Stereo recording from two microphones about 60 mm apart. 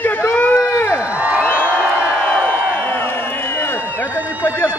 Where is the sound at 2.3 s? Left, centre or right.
Left.